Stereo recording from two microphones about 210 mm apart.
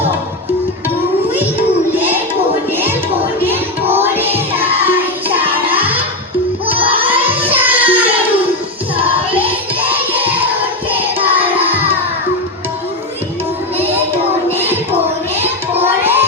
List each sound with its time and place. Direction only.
3.4 s music: 10° right (ahead or behind)
6.7 s music: 25° right (ahead or behind)
7.1 s music: 10° right (ahead or behind)
10.8 s music: 10° right (ahead or behind)
15.4 s music: 10° right (ahead or behind)